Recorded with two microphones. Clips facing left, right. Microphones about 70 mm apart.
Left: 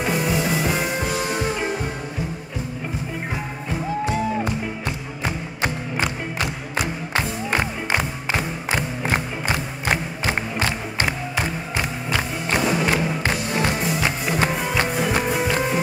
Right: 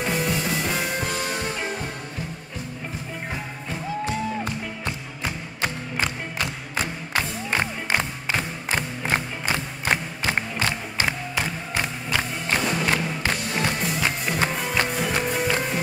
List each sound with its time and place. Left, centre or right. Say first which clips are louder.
0.0 s music: left 3 dB; centre
5.2 s music: left 3 dB; left
7.5 s music: left 1 dB; centre
12.5 s music: left 3 dB; centre